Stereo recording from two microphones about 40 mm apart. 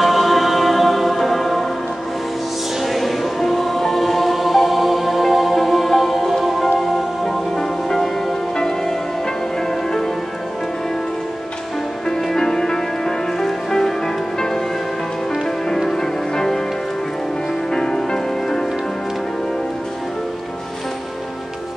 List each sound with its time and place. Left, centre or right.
0.0 s music: centre
2.8 s music: centre
12.1 s music: centre
15.7 s music: centre
17.6 s music: centre